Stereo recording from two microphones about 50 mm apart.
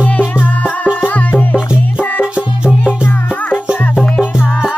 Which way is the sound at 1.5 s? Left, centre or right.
Centre.